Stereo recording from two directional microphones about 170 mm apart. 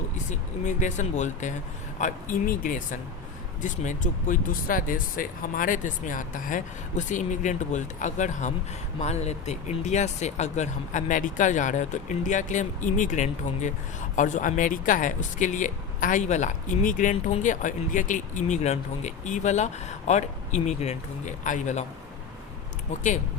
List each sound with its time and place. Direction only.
0.3 s speech: 45° left (ahead or behind)